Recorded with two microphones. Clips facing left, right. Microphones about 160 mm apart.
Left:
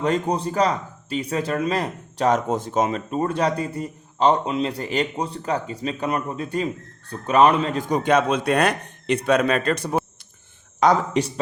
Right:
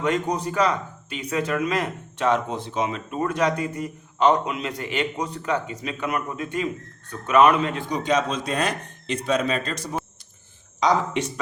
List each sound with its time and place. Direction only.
0.0 s a man's voice: 30° left (ahead or behind); by 11.0 s 55° left (ahead or behind)